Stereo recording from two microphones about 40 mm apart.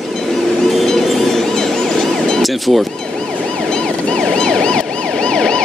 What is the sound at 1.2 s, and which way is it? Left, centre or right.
Ambulance, centre.